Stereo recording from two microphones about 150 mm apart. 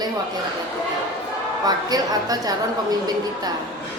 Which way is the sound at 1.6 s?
25° right (ahead or behind).